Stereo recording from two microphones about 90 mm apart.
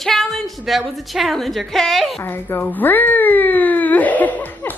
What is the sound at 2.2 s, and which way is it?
Speech, 25° left (ahead or behind).